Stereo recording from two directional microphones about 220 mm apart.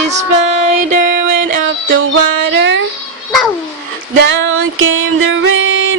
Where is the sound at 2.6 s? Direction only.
55° right (ahead or behind).